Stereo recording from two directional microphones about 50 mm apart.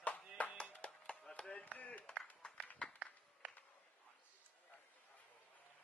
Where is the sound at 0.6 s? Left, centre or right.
Left.